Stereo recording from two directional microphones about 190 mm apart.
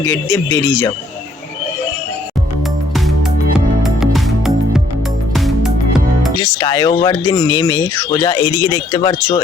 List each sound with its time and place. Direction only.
0.0 s speech: 15° left (ahead or behind)
3.8 s music: centre (ahead or behind)
6.4 s speech: 25° left (ahead or behind)